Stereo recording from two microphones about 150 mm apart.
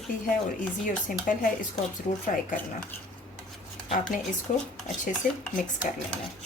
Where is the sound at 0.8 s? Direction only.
60° left (ahead or behind).